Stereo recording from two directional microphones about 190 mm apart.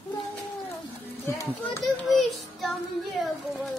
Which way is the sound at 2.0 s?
Centre (ahead or behind).